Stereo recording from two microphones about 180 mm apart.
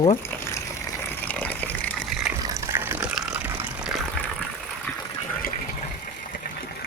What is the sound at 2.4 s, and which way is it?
Water, 15° right (ahead or behind).